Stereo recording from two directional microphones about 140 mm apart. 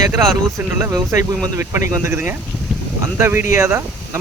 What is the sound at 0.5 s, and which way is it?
Speech, 20° right (ahead or behind).